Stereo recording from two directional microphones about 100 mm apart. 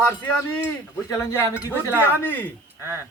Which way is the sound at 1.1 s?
35° left (ahead or behind).